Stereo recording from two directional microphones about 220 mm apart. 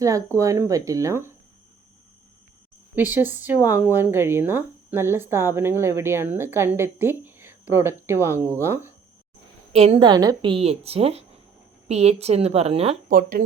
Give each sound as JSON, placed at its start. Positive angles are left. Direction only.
{"t": 0.0, "sound": "speech", "side_deg": -15}
{"t": 2.9, "sound": "speech", "side_deg": -10}
{"t": 9.7, "sound": "a woman's voice", "side_deg": -25}
{"t": 13.1, "sound": "speech", "side_deg": -40}